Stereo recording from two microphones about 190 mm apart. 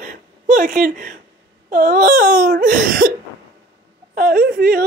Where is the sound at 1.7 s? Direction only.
45° right (ahead or behind).